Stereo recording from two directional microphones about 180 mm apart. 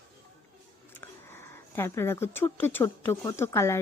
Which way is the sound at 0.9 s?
15° left (ahead or behind).